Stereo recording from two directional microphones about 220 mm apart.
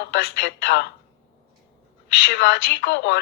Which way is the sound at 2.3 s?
50° left (ahead or behind).